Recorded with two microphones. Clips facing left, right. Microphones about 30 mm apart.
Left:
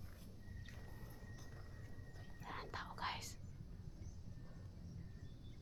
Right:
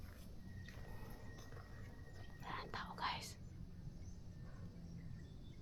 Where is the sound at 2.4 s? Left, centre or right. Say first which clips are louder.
Right 1 dB; centre.